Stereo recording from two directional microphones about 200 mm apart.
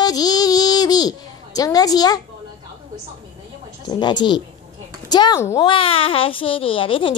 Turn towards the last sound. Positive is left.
turn(degrees=25)  # may be behind; listen again after turning